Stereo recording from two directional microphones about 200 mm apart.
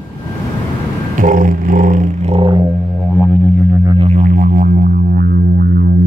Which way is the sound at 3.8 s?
30° right (ahead or behind).